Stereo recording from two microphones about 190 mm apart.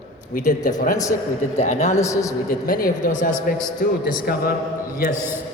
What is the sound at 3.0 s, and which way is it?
A man's voice, 40° left (ahead or behind).